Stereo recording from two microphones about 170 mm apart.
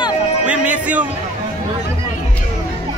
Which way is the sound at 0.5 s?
10° right (ahead or behind).